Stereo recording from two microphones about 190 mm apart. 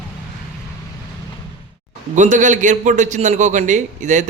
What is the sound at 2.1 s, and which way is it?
A man's voice, 40° right (ahead or behind).